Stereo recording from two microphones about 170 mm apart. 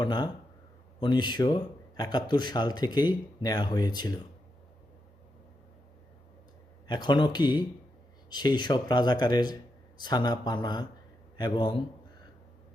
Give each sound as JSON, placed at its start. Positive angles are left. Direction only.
{"t": 0.0, "sound": "speech", "side_deg": 25}
{"t": 6.8, "sound": "speech", "side_deg": 25}